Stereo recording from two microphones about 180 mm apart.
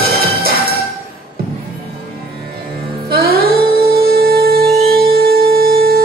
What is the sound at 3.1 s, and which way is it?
Music, 60° right (ahead or behind).